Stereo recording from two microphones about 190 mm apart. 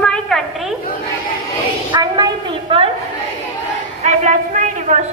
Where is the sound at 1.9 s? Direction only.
20° right (ahead or behind).